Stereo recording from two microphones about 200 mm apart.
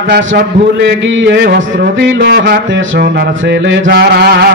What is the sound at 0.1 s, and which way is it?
A man's voice, 60° right (ahead or behind).